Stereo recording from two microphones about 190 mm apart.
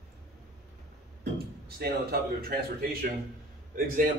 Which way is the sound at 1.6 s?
55° right (ahead or behind).